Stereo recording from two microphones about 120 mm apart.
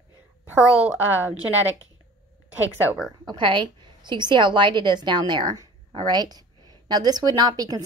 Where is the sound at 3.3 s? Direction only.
40° right (ahead or behind).